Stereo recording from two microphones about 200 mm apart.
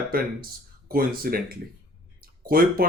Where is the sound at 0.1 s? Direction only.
45° right (ahead or behind).